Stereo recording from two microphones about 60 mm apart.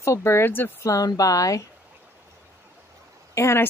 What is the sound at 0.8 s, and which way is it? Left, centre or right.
Speech, left.